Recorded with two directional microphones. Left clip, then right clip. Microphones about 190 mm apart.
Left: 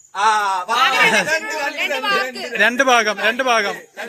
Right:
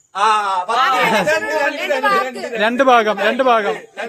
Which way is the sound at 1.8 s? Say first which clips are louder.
Even; 55° right (ahead or behind).